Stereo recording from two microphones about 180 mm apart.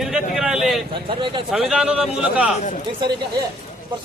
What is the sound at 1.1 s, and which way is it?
Speech, 25° right (ahead or behind).